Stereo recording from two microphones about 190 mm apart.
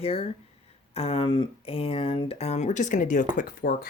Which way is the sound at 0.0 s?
30° left (ahead or behind).